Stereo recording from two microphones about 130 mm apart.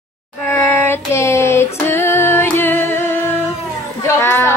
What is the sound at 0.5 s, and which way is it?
Child singing, 15° left (ahead or behind).